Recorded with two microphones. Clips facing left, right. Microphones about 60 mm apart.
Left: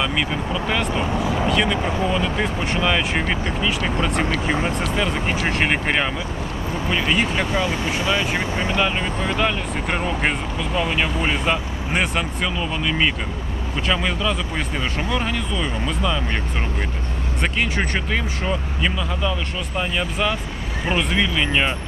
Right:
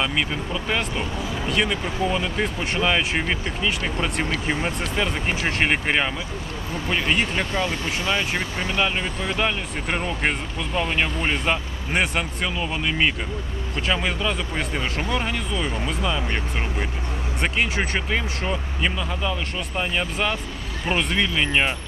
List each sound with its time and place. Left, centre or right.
0.0 s speech: centre
4.9 s speech: centre
7.5 s speech: centre
8.1 s speech: centre
8.4 s speech: centre
8.7 s speech: centre
17.4 s speech: centre